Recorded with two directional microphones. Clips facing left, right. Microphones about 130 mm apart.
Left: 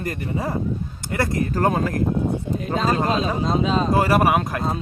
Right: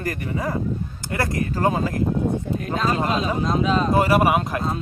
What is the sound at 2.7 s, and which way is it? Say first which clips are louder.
Speech: left 2 dB; 35° left (ahead or behind).